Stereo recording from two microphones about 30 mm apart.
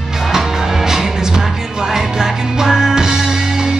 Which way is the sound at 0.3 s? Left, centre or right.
Centre.